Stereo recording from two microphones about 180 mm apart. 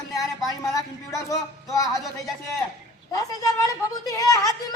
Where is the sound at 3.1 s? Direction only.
20° left (ahead or behind).